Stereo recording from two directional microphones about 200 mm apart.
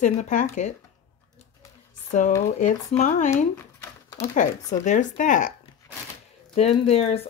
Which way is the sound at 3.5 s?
15° left (ahead or behind).